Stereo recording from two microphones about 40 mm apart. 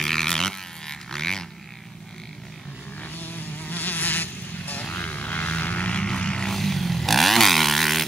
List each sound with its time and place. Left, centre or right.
0.0 s a sound: centre
3.2 s insect: left
4.9 s vehicle: left
6.0 s vehicle: left
6.4 s vehicle: centre